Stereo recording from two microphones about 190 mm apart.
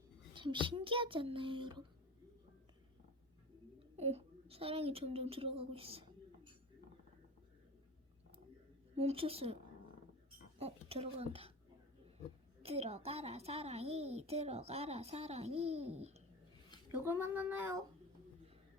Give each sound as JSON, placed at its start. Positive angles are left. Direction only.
{"t": 0.3, "sound": "a child's voice", "side_deg": -25}
{"t": 3.8, "sound": "a child's voice", "side_deg": -35}
{"t": 9.0, "sound": "a child's voice", "side_deg": -30}
{"t": 10.6, "sound": "a child's voice", "side_deg": -30}
{"t": 12.6, "sound": "a child's voice", "side_deg": -35}
{"t": 16.9, "sound": "speech", "side_deg": -10}